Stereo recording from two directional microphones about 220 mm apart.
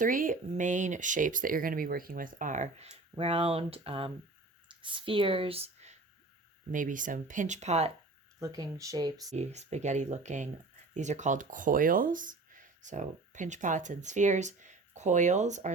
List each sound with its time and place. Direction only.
0.0 s speech: 40° right (ahead or behind)
8.4 s speech: 15° right (ahead or behind)
9.3 s speech: 30° right (ahead or behind)